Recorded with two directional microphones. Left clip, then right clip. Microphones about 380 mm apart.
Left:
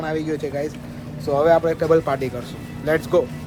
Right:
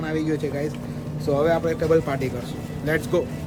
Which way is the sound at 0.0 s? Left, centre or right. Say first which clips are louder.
Left 1 dB; centre.